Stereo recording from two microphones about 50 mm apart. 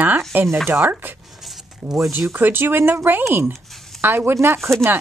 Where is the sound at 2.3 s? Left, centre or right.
Right.